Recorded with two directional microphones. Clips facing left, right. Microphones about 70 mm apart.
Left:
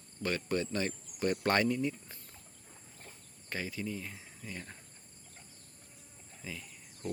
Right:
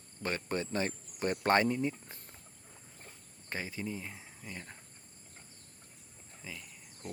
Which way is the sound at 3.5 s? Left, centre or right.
Right.